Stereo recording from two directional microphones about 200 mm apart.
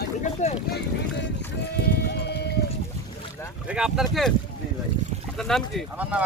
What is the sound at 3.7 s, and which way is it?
Speech, 5° right (ahead or behind).